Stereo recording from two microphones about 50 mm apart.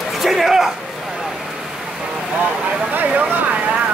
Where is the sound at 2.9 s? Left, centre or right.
Right.